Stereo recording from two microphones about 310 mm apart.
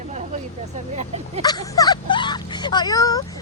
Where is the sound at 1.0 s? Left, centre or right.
Right.